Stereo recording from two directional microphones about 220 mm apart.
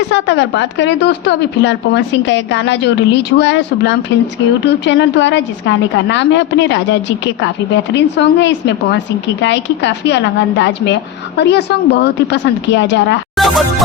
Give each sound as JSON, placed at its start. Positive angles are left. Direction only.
{"t": 0.1, "sound": "a woman's voice", "side_deg": 55}
{"t": 7.9, "sound": "a woman's voice", "side_deg": 55}
{"t": 13.3, "sound": "music", "side_deg": 0}